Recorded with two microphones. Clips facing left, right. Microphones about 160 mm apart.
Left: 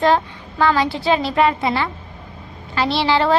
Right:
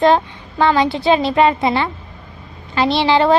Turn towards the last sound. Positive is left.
turn(degrees=-20)  # may be behind; listen again after turning